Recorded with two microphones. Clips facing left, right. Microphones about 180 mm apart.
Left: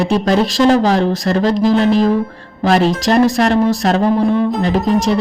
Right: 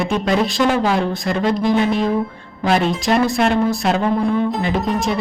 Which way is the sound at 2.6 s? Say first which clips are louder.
Left 4 dB; 40° left (ahead or behind).